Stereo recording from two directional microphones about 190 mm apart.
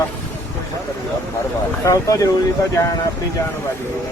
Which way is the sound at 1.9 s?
15° left (ahead or behind).